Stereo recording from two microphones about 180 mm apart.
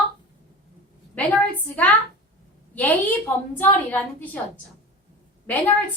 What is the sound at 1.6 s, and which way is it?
A woman's voice, 10° left (ahead or behind).